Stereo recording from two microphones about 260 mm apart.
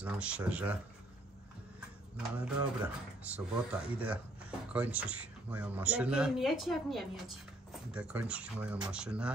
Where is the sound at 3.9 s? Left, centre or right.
Centre.